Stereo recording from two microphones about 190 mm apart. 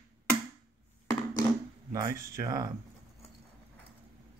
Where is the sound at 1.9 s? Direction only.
15° right (ahead or behind).